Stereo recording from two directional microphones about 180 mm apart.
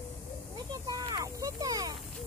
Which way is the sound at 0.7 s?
20° right (ahead or behind).